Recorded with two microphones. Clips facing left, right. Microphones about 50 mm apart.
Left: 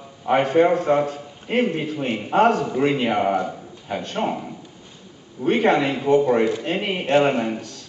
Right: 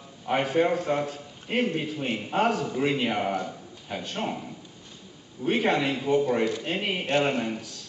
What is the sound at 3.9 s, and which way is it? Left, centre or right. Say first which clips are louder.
A man's voice: left 7 dB; centre.